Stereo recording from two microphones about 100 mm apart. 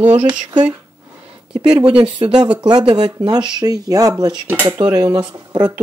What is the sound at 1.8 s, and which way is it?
Speech, 55° right (ahead or behind).